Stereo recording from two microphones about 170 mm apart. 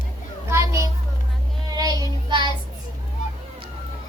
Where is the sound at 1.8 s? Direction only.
20° right (ahead or behind).